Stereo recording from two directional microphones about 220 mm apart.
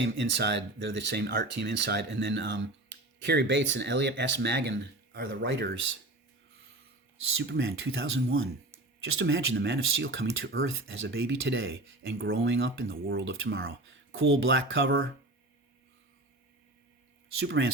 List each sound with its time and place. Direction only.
0.0 s speech: 50° right (ahead or behind)
7.3 s speech: 60° right (ahead or behind)
12.9 s speech: 50° right (ahead or behind)
17.4 s speech: 55° right (ahead or behind)